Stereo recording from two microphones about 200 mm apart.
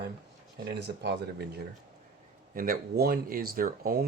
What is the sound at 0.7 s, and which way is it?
Speech, 55° right (ahead or behind).